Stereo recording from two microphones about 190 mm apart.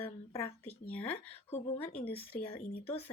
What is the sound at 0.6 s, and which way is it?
Speech, 10° left (ahead or behind).